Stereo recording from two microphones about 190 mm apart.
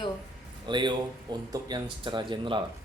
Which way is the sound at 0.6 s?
25° right (ahead or behind).